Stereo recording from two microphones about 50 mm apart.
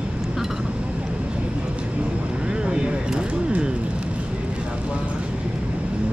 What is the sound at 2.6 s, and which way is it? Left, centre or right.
Speech, centre.